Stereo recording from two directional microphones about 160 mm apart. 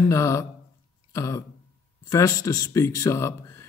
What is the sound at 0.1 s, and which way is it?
Speech, 20° left (ahead or behind).